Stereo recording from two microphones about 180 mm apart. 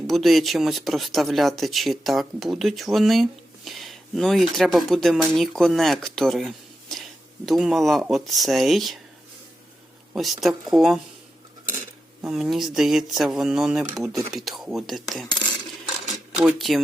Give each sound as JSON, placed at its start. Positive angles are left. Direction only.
{"t": 0.1, "sound": "speech", "side_deg": 0}
{"t": 10.2, "sound": "speech", "side_deg": 0}
{"t": 12.2, "sound": "speech", "side_deg": 0}
{"t": 16.4, "sound": "speech", "side_deg": -5}